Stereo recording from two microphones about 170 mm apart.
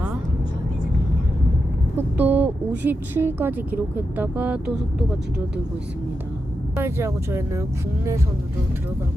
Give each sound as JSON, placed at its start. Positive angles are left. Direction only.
{"t": 2.0, "sound": "speech", "side_deg": -10}
{"t": 6.7, "sound": "speech", "side_deg": -15}